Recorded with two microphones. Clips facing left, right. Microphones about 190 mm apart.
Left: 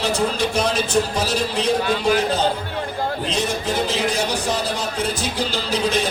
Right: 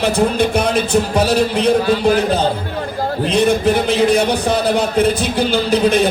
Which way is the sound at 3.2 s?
60° right (ahead or behind).